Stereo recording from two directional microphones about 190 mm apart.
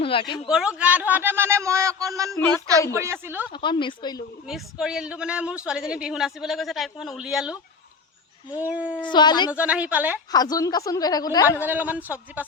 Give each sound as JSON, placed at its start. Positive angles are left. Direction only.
{"t": 0.0, "sound": "speech", "side_deg": 30}
{"t": 0.4, "sound": "speech", "side_deg": -5}
{"t": 3.5, "sound": "speech", "side_deg": 25}
{"t": 4.4, "sound": "speech", "side_deg": -5}
{"t": 9.0, "sound": "speech", "side_deg": 25}
{"t": 9.5, "sound": "speech", "side_deg": -5}
{"t": 10.3, "sound": "speech", "side_deg": 20}
{"t": 11.6, "sound": "speech", "side_deg": -10}